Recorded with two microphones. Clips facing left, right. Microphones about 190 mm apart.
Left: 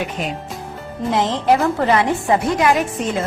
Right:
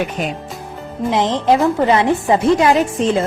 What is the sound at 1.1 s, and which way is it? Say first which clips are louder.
Speech: right 2 dB; 20° right (ahead or behind).